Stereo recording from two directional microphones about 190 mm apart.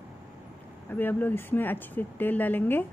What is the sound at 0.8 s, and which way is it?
Speech, 10° left (ahead or behind).